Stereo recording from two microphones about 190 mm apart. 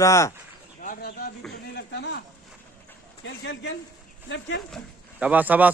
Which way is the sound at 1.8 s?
60° left (ahead or behind).